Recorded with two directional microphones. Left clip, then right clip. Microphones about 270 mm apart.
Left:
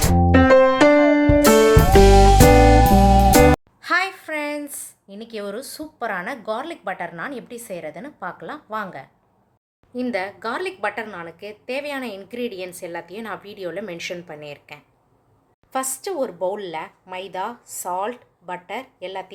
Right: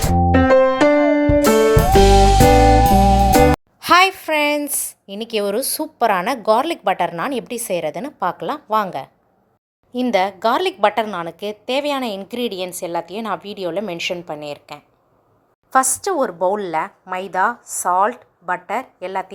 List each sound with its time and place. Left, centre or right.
0.0 s music: centre
3.8 s a woman's voice: right